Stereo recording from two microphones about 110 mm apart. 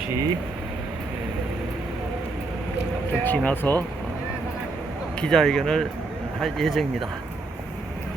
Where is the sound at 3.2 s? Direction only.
15° left (ahead or behind).